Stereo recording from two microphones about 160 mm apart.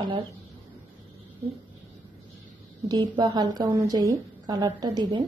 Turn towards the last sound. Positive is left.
turn(degrees=-25)  # may be behind; listen again after turning